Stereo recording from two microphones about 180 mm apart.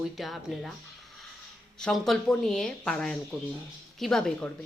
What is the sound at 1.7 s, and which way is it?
A woman's voice, 5° left (ahead or behind).